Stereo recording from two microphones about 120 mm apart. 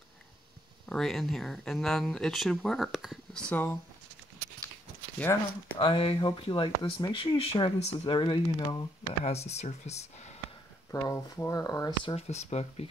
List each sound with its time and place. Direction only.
0.8 s speech: 5° left (ahead or behind)
3.4 s speech: 15° left (ahead or behind)
5.2 s speech: 15° left (ahead or behind)
5.8 s speech: 45° left (ahead or behind)
9.2 s speech: 65° left (ahead or behind)
10.9 s speech: 25° left (ahead or behind)
12.2 s speech: 65° left (ahead or behind)